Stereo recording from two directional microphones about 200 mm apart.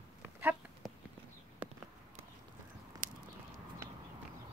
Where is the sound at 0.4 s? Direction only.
10° right (ahead or behind).